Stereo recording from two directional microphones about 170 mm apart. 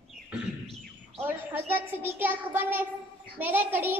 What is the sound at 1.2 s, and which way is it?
A child's voice, 10° right (ahead or behind).